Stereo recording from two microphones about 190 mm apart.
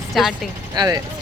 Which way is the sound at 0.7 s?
20° right (ahead or behind).